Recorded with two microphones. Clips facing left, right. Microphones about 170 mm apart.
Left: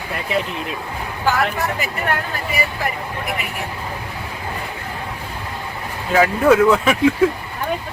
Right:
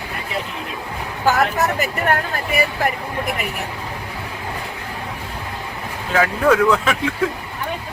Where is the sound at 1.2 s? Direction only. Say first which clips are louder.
Right 2 dB; 45° right (ahead or behind).